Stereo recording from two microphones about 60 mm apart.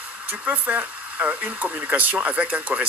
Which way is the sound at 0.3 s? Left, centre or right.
Right.